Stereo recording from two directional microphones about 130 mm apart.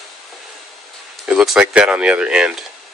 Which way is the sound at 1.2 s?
5° right (ahead or behind).